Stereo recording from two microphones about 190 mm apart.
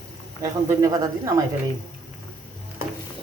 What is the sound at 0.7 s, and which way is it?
Speech, 15° right (ahead or behind).